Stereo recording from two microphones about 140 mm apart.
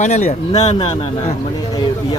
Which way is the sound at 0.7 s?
40° left (ahead or behind).